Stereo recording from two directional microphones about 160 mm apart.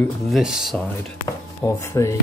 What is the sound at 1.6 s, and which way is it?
Speech, 20° left (ahead or behind).